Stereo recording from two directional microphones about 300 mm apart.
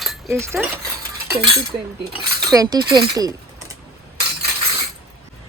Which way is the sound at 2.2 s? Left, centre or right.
Right.